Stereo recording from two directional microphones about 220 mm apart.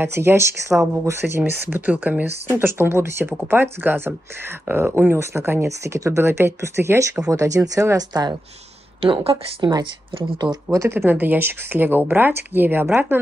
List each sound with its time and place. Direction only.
0.0 s speech: 10° right (ahead or behind)